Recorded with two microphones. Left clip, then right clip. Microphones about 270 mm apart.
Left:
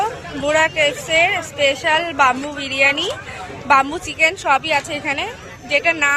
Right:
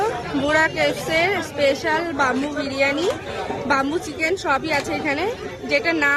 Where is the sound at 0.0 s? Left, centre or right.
Centre.